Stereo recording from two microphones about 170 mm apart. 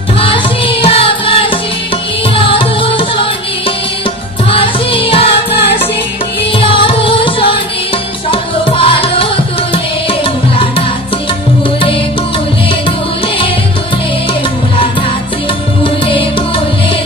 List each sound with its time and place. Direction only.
0.2 s music: 30° left (ahead or behind)
4.5 s music: 35° left (ahead or behind)
5.5 s music: 80° left
6.6 s music: 30° left (ahead or behind)
15.8 s music: 30° left (ahead or behind)